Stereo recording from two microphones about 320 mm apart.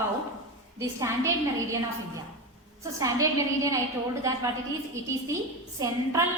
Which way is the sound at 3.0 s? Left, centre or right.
Centre.